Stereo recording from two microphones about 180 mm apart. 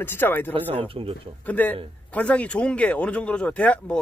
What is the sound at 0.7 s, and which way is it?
Speech, 30° right (ahead or behind).